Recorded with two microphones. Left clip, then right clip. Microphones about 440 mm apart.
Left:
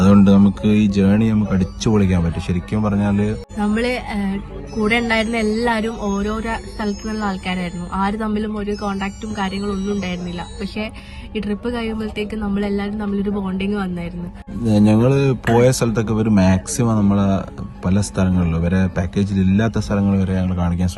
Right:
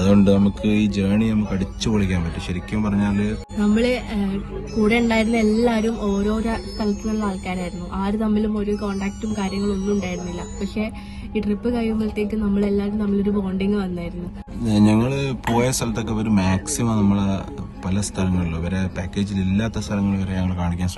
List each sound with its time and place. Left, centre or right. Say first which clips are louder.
0.3 s speech: left 3 dB; centre
11.3 s speech: even; centre
14.6 s speech: left 3 dB; centre